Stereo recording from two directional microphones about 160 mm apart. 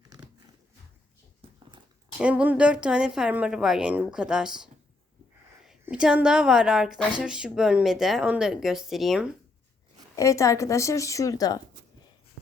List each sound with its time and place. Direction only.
2.2 s speech: 10° right (ahead or behind)
5.8 s speech: 5° right (ahead or behind)
10.2 s a woman's voice: 20° left (ahead or behind)